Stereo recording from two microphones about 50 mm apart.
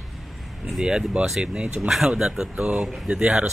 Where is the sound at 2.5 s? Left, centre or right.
Right.